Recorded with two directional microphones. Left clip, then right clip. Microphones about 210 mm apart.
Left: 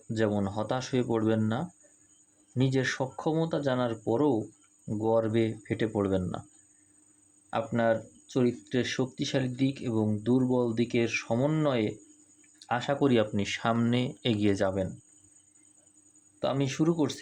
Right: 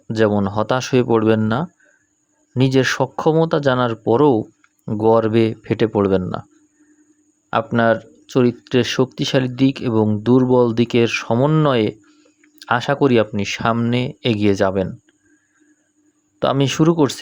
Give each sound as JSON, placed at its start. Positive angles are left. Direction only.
{"t": 0.1, "sound": "speech", "side_deg": -40}
{"t": 7.5, "sound": "speech", "side_deg": -40}
{"t": 16.4, "sound": "speech", "side_deg": -45}